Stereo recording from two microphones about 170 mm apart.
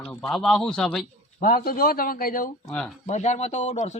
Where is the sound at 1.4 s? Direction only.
60° left (ahead or behind).